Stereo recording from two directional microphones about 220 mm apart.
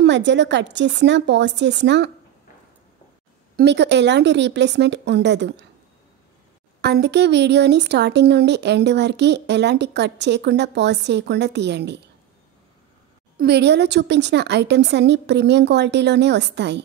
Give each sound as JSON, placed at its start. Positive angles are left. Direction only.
{"t": 0.0, "sound": "speech", "side_deg": -55}
{"t": 3.5, "sound": "speech", "side_deg": -50}
{"t": 6.8, "sound": "speech", "side_deg": -50}
{"t": 13.4, "sound": "speech", "side_deg": -50}